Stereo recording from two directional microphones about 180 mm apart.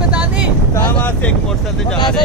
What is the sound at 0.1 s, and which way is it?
Vehicle, 5° right (ahead or behind).